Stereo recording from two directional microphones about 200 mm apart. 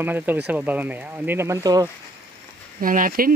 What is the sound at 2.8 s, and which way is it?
Speech, 45° right (ahead or behind).